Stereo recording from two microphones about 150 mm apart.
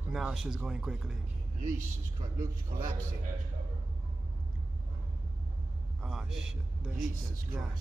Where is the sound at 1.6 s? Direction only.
60° right (ahead or behind).